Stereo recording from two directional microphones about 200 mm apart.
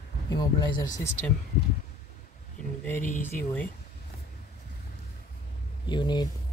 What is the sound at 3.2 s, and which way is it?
Speech, 5° left (ahead or behind).